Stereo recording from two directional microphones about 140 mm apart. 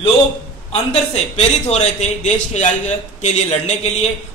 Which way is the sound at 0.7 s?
50° left (ahead or behind).